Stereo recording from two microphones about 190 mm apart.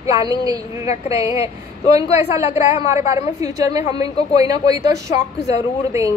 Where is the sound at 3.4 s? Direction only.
15° right (ahead or behind).